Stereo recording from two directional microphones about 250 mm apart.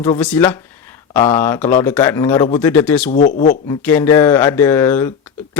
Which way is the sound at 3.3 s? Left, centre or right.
Left.